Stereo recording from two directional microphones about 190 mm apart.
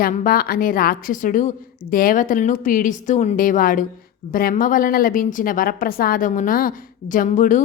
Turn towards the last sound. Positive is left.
turn(degrees=45)  # may be behind; listen again after turning